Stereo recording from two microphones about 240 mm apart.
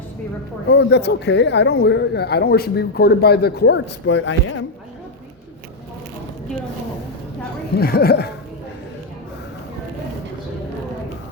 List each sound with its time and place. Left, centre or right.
0.7 s speech: left
7.8 s speech: left